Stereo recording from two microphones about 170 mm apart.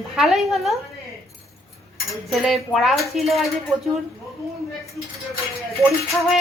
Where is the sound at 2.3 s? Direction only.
Centre (ahead or behind).